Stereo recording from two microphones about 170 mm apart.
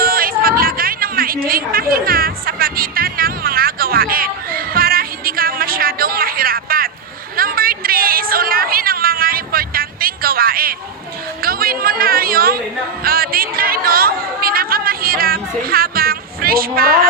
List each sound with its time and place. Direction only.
0.0 s a sound: 60° right (ahead or behind)
7.3 s cat: 60° right (ahead or behind)
11.4 s chatter: 60° right (ahead or behind)